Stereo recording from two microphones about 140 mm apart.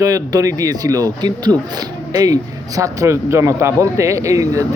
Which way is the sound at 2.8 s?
20° right (ahead or behind).